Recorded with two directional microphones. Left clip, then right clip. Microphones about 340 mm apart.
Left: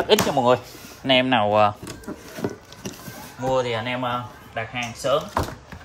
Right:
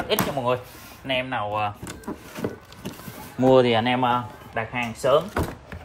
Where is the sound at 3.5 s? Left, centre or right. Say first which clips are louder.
Right 4 dB; right.